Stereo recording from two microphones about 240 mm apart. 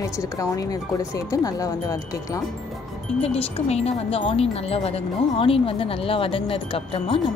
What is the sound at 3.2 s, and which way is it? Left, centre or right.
Speech, left.